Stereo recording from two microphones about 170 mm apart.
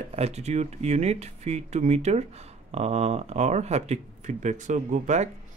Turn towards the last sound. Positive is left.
turn(degrees=-45)  # may be behind; listen again after turning